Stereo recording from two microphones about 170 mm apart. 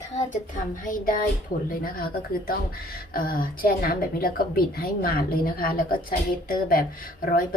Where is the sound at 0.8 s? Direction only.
55° left (ahead or behind).